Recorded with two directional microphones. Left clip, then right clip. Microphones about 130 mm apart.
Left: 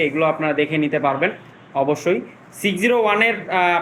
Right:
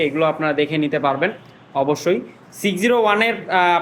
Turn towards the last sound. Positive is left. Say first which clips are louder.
# right 1 dB
turn(degrees=-15)  # may be behind; listen again after turning